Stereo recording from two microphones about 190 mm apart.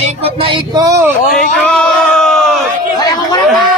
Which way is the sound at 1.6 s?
5° left (ahead or behind).